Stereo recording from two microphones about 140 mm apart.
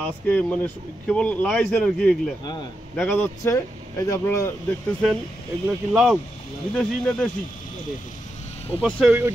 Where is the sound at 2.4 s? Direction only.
30° left (ahead or behind).